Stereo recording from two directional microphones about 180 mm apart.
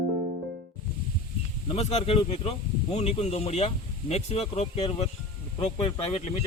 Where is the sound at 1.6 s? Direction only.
35° left (ahead or behind).